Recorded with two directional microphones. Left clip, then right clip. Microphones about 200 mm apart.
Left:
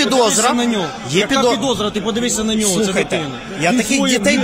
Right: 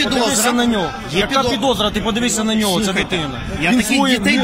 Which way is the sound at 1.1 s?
50° left (ahead or behind).